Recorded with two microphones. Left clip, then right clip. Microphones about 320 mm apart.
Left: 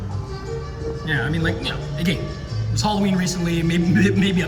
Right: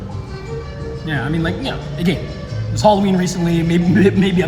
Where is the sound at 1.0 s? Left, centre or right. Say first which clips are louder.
Right 2 dB; centre.